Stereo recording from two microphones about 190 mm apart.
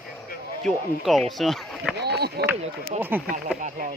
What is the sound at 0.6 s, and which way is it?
Speech, centre (ahead or behind).